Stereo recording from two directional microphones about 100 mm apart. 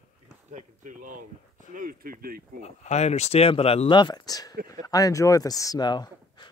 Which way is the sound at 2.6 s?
90° left.